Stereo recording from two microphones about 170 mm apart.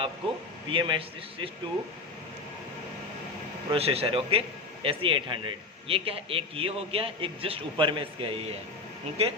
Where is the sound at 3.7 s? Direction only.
35° right (ahead or behind).